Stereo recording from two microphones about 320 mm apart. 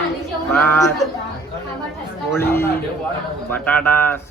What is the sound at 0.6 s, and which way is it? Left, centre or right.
Speech, centre.